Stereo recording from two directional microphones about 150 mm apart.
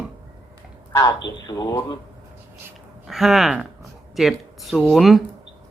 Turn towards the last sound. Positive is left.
turn(degrees=0)  # may be behind; listen again after turning